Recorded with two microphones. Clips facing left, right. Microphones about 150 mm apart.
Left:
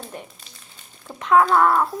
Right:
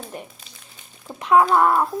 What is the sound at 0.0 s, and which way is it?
Crumpling, 5° right (ahead or behind).